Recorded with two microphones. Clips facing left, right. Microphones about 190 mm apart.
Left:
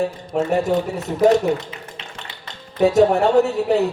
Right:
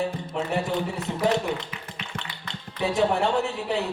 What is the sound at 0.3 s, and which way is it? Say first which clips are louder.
Speech: left 10 dB; 45° left (ahead or behind).